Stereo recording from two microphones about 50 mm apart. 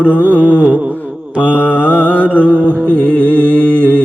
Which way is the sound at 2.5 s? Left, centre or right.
Right.